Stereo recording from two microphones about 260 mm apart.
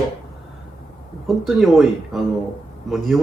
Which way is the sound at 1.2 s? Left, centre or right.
Centre.